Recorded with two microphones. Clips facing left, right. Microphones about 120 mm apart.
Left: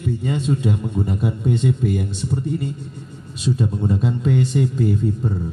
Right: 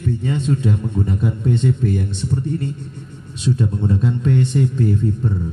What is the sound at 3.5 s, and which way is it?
Speech, 30° left (ahead or behind).